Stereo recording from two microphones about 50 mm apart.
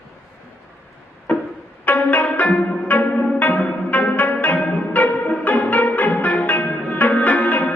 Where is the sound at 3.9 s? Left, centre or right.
Left.